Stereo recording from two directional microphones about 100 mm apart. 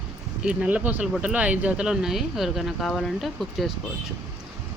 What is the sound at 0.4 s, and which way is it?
Speech, 15° right (ahead or behind).